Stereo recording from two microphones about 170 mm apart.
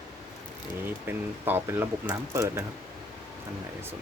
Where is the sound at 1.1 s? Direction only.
15° right (ahead or behind).